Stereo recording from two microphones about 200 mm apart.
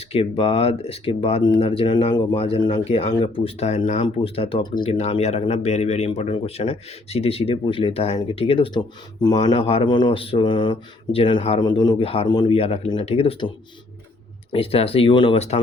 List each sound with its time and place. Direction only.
0.1 s speech: 30° left (ahead or behind)
14.5 s speech: 30° left (ahead or behind)